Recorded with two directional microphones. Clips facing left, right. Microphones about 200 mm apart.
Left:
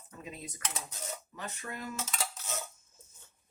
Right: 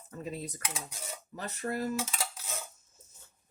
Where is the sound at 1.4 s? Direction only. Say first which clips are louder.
Right 9 dB; 35° right (ahead or behind).